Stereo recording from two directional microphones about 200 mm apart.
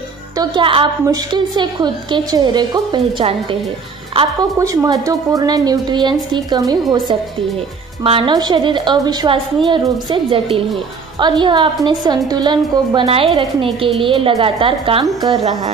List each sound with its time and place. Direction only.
0.4 s a woman's voice: 25° right (ahead or behind)